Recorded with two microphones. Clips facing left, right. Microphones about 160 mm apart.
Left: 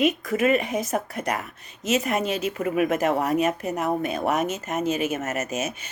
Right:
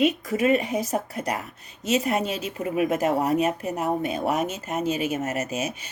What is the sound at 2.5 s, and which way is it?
Speech, 55° left (ahead or behind).